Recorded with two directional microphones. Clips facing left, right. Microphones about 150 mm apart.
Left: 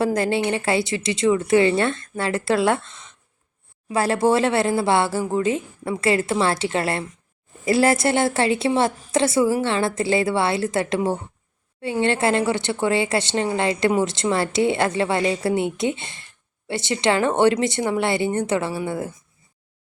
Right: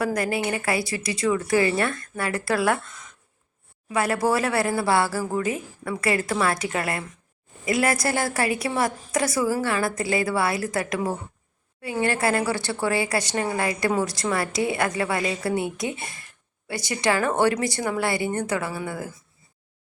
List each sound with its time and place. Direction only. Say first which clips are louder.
0.0 s a woman's voice: left 4 dB; 25° left (ahead or behind)